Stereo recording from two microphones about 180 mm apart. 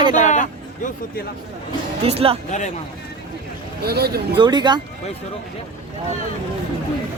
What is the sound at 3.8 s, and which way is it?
Speech, 60° right (ahead or behind).